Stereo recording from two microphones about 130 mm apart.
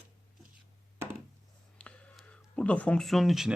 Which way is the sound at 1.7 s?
10° left (ahead or behind).